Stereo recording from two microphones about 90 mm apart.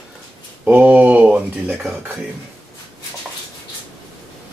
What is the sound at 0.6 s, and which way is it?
Speech, 15° right (ahead or behind).